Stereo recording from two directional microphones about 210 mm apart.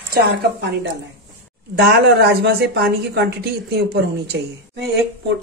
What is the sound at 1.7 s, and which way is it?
A woman's voice, 50° right (ahead or behind).